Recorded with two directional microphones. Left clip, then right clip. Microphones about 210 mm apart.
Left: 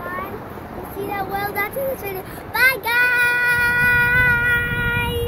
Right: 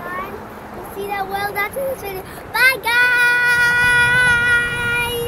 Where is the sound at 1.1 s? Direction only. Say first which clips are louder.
Right 2 dB; centre (ahead or behind).